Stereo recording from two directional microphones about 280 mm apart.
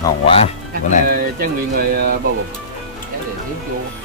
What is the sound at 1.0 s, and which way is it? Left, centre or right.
Speech, right.